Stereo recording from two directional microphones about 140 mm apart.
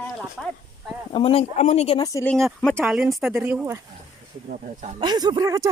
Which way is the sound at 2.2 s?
5° left (ahead or behind).